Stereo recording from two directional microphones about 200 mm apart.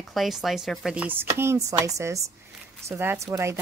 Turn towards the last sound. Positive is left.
turn(degrees=-15)  # may be behind; listen again after turning